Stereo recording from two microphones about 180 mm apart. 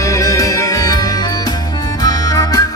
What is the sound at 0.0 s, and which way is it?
Music, 15° left (ahead or behind).